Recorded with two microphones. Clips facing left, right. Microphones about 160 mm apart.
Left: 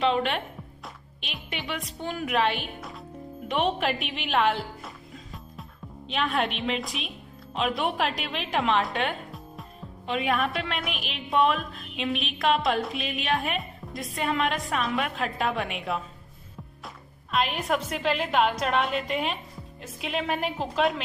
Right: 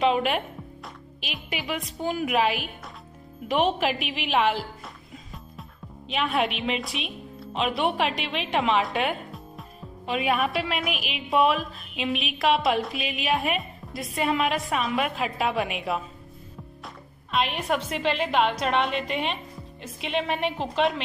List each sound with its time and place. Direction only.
0.0 s a woman's voice: 10° right (ahead or behind)
17.3 s a woman's voice: centre (ahead or behind)